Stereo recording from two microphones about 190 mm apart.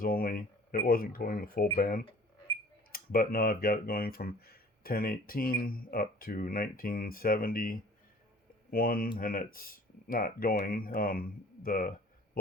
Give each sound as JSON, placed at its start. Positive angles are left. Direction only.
{"t": 0.0, "sound": "speech", "side_deg": 50}